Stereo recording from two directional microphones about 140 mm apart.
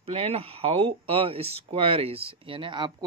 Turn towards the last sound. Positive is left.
turn(degrees=-35)  # may be behind; listen again after turning